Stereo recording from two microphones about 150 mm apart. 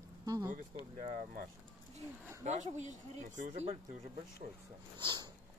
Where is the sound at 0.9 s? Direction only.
60° right (ahead or behind).